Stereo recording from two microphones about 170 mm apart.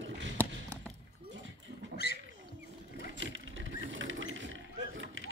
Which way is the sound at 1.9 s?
70° left (ahead or behind).